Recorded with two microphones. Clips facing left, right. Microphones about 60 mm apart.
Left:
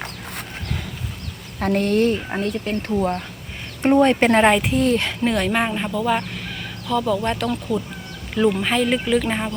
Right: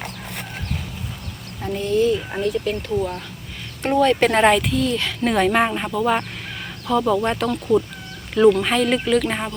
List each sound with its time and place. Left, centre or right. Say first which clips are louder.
1.6 s speech: left 1 dB; left
2.4 s speech: right 2 dB; left
3.8 s speech: left 2 dB; left
4.3 s speech: left 1 dB; centre
4.7 s speech: left 3 dB; left
5.2 s speech: right 6 dB; centre
8.4 s speech: right 4 dB; centre